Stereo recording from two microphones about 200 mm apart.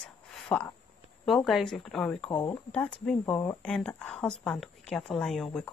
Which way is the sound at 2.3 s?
20° left (ahead or behind).